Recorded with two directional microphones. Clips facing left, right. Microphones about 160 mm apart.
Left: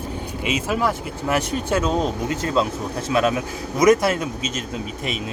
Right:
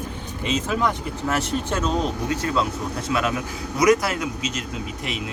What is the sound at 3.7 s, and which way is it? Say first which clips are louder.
Speech: left 3 dB; 30° left (ahead or behind).